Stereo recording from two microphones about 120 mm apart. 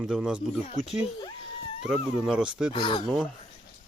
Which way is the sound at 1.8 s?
5° right (ahead or behind).